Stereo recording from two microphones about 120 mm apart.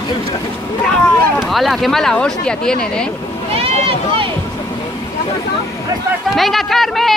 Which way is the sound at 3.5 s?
50° right (ahead or behind).